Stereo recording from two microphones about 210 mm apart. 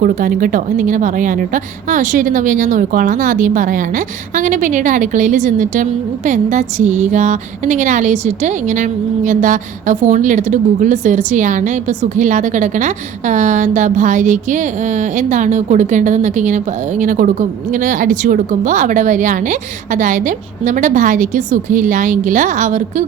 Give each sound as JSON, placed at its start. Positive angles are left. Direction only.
{"t": 0.0, "sound": "a woman's voice", "side_deg": -40}